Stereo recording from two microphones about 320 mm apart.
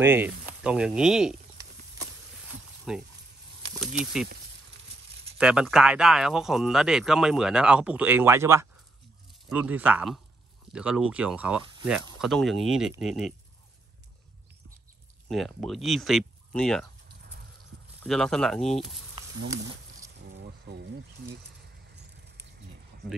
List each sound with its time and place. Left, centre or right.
0.0 s a sound: centre
3.8 s speech: centre
5.4 s speech: centre
15.2 s speech: centre
18.0 s speech: centre
20.3 s a sound: right